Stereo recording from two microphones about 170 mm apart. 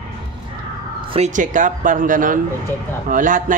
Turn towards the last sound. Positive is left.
turn(degrees=-50)  # may be behind; listen again after turning